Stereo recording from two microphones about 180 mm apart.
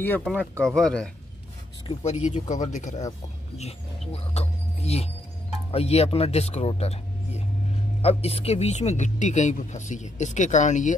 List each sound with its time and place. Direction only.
0.2 s speech: 5° left (ahead or behind)
1.9 s speech: 35° left (ahead or behind)
4.1 s speech: 35° left (ahead or behind)